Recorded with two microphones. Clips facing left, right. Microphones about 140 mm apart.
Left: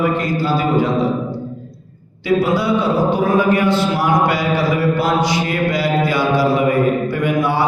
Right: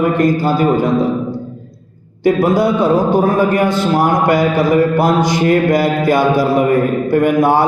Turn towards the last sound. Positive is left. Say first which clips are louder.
# right 5 dB
turn(degrees=-45)  # may be behind; listen again after turning